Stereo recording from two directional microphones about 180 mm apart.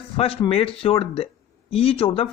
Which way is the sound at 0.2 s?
30° left (ahead or behind).